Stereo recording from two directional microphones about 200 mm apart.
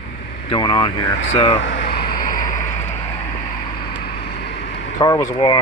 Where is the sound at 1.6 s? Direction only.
60° left (ahead or behind); by 2.6 s 40° left (ahead or behind).